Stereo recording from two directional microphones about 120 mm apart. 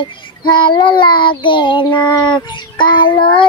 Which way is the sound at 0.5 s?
40° left (ahead or behind).